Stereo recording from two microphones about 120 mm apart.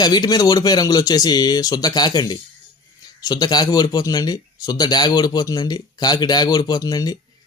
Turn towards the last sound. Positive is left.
turn(degrees=30)  # may be behind; listen again after turning